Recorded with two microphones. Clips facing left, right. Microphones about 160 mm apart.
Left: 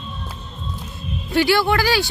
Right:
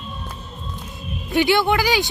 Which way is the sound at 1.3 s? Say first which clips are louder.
Even; 20° right (ahead or behind).